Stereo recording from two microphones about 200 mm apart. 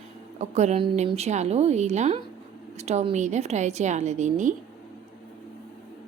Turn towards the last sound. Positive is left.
turn(degrees=-35)  # may be behind; listen again after turning